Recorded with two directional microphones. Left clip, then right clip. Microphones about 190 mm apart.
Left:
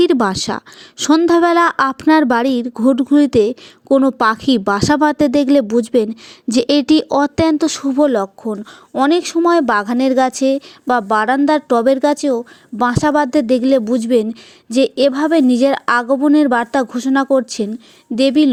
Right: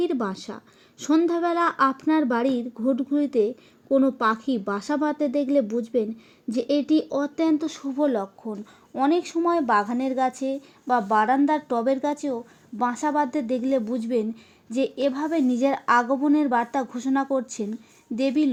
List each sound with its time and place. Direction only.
0.0 s speech: 40° left (ahead or behind)